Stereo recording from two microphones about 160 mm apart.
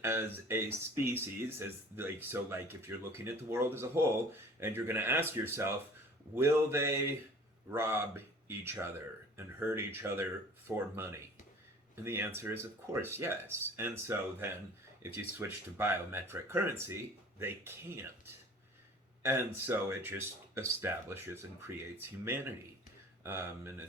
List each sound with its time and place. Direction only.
0.0 s speech: 15° right (ahead or behind)
12.0 s speech: 15° right (ahead or behind)
19.2 s speech: 15° right (ahead or behind)